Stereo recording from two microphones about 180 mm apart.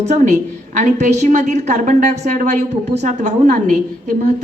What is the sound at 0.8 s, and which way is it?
A woman's voice, 40° right (ahead or behind).